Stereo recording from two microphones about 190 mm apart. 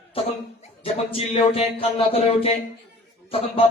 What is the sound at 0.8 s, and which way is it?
Speech, 30° left (ahead or behind).